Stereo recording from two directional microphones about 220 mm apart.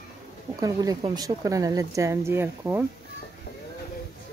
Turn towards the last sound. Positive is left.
turn(degrees=-10)  # may be behind; listen again after turning